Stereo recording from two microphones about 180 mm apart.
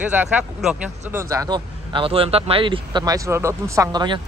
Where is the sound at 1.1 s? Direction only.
15° right (ahead or behind).